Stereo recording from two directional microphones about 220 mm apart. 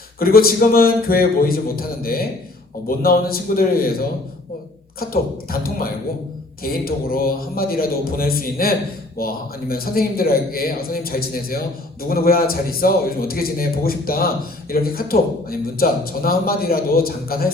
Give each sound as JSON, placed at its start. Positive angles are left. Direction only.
{"t": 0.2, "sound": "a man's voice", "side_deg": 40}